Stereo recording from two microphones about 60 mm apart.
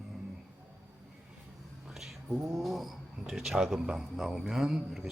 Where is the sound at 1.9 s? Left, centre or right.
Centre.